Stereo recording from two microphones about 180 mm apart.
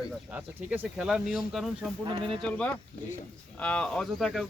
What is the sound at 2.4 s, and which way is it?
Speech, 5° left (ahead or behind).